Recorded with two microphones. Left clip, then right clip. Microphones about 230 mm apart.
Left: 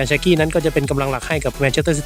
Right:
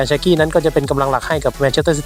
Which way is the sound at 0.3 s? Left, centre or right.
Left.